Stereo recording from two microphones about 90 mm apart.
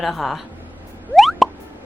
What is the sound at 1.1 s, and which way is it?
Plop, centre (ahead or behind).